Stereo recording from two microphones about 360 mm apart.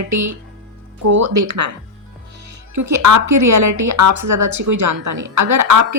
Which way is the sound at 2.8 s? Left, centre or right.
Right.